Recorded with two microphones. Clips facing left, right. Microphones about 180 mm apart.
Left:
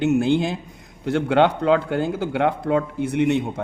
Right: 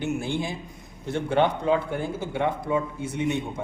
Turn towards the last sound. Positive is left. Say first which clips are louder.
# left 7 dB
turn(degrees=75)  # may be behind; listen again after turning